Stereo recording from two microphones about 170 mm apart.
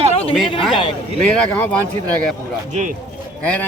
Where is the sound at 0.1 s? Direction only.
35° left (ahead or behind).